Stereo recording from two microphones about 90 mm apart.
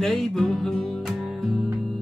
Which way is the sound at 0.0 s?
5° left (ahead or behind).